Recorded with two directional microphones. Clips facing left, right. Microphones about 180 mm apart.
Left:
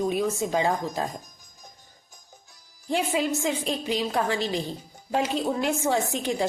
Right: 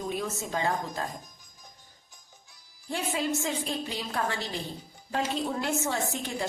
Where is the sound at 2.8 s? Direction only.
15° left (ahead or behind).